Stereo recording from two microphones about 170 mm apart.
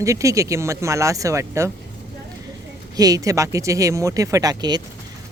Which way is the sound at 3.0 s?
20° right (ahead or behind).